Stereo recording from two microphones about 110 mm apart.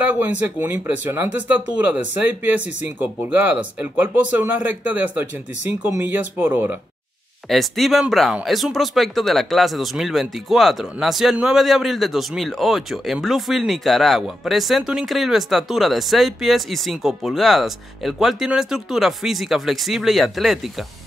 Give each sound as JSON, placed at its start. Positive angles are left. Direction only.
{"t": 0.1, "sound": "speech", "side_deg": -15}
{"t": 7.4, "sound": "speech", "side_deg": 0}